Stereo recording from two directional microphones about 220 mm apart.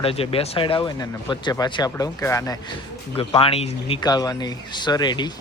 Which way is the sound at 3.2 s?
25° left (ahead or behind).